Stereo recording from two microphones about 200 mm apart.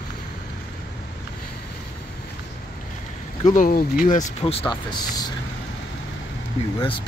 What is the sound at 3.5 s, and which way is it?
Speech, 45° left (ahead or behind).